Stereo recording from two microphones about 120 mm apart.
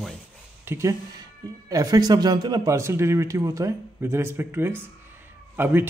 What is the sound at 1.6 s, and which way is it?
A man's voice, 30° right (ahead or behind).